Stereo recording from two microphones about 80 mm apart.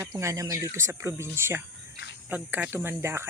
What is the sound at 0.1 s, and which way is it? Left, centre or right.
Speech, right.